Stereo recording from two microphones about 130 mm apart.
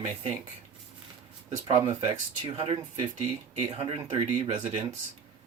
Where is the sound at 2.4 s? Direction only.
45° right (ahead or behind).